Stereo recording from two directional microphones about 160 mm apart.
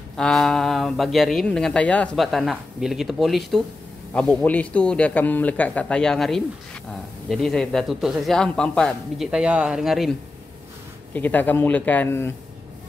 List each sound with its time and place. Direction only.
0.1 s speech: 5° left (ahead or behind)
9.3 s speech: 5° right (ahead or behind)
11.1 s speech: 10° left (ahead or behind)